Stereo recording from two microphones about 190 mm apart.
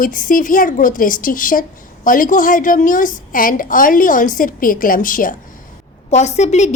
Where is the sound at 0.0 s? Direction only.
45° left (ahead or behind).